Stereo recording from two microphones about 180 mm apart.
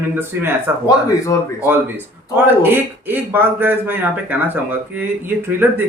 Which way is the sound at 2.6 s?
10° right (ahead or behind).